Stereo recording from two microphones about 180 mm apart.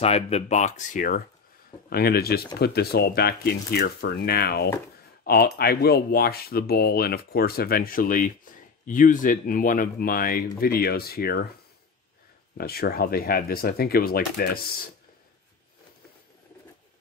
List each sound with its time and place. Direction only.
0.0 s speech: 35° left (ahead or behind)
1.9 s speech: 60° left (ahead or behind)
12.5 s speech: 60° left (ahead or behind)